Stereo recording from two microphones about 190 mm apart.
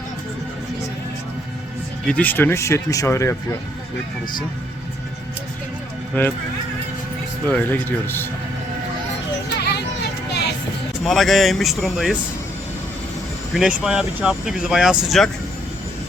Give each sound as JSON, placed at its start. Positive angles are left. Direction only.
{"t": 2.0, "sound": "speech", "side_deg": 10}
{"t": 7.4, "sound": "speech", "side_deg": 10}
{"t": 9.6, "sound": "a sound", "side_deg": 60}
{"t": 11.0, "sound": "speech", "side_deg": 0}
{"t": 13.5, "sound": "speech", "side_deg": 0}